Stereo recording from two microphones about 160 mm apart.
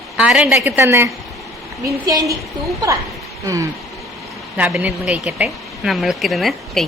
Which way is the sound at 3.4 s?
20° right (ahead or behind).